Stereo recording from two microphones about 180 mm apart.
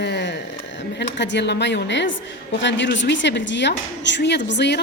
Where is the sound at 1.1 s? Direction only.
75° left (ahead or behind).